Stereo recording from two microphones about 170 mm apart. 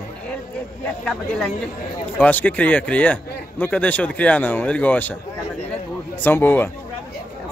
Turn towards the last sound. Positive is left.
turn(degrees=10)  # may be behind; listen again after turning